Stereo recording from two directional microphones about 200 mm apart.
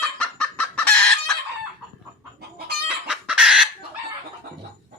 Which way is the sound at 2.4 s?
55° right (ahead or behind).